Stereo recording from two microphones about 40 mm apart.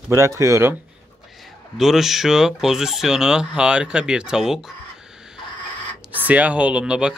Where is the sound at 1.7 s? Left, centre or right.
Centre.